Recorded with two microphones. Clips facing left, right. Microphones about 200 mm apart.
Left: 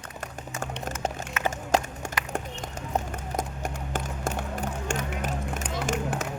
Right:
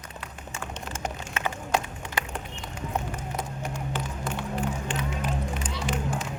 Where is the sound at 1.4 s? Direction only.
45° left (ahead or behind).